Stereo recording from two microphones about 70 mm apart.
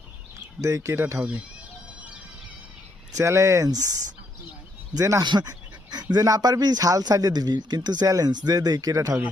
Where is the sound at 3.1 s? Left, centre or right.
Right.